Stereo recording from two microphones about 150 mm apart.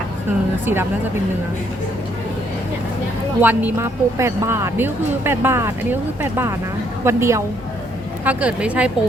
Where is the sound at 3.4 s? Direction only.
10° right (ahead or behind).